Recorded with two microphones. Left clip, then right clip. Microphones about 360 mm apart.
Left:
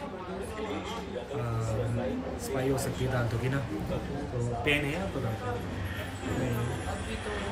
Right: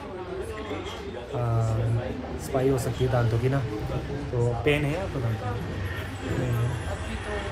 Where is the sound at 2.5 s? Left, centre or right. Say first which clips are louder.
Right 6 dB; centre.